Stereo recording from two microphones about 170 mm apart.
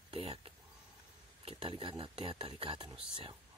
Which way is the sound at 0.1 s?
35° right (ahead or behind).